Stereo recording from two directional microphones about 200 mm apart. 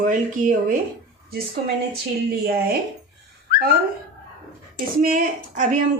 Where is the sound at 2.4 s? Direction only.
50° right (ahead or behind).